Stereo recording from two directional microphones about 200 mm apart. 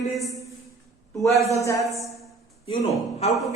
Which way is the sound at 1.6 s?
15° left (ahead or behind).